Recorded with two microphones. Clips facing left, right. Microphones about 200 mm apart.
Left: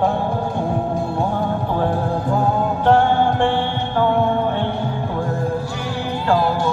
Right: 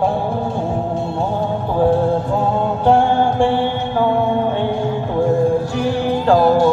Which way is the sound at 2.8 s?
10° right (ahead or behind).